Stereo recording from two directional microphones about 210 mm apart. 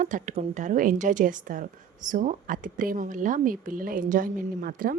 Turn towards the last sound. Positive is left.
turn(degrees=-40)  # may be behind; listen again after turning